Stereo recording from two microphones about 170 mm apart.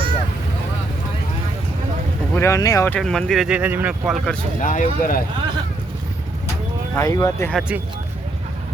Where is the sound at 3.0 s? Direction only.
5° left (ahead or behind).